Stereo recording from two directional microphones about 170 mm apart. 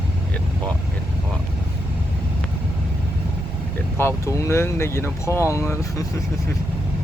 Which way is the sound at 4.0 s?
15° left (ahead or behind).